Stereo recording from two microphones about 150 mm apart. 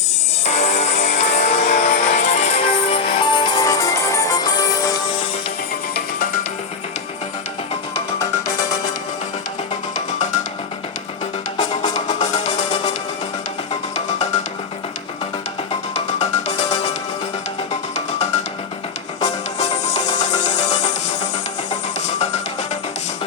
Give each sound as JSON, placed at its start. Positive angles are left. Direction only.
{"t": 0.4, "sound": "music", "side_deg": 45}
{"t": 8.2, "sound": "music", "side_deg": 20}
{"t": 11.9, "sound": "music", "side_deg": 50}
{"t": 16.1, "sound": "music", "side_deg": 45}
{"t": 19.2, "sound": "music", "side_deg": 45}